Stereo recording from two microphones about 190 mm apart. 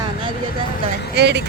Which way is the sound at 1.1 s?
60° right (ahead or behind).